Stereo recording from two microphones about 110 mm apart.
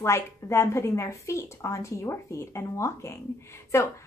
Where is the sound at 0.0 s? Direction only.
25° left (ahead or behind).